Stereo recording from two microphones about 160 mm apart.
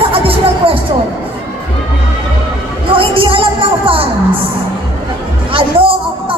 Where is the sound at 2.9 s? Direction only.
35° right (ahead or behind).